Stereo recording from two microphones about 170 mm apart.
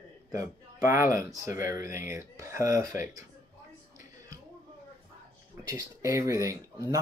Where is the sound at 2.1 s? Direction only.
15° right (ahead or behind).